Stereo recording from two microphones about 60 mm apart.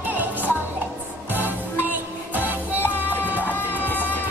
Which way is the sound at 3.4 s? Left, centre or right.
Left.